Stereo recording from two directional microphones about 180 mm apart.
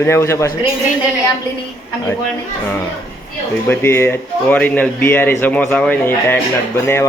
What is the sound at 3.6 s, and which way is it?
Speech, 10° left (ahead or behind).